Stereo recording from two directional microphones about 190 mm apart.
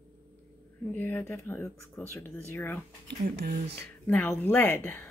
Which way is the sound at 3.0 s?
60° right (ahead or behind).